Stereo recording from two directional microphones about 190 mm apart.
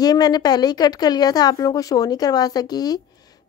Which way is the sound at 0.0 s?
20° left (ahead or behind).